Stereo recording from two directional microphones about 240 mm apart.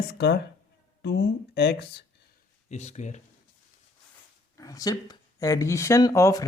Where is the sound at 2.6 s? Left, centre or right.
Left.